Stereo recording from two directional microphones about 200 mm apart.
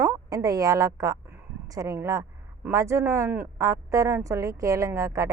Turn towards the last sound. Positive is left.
turn(degrees=-15)  # may be behind; listen again after turning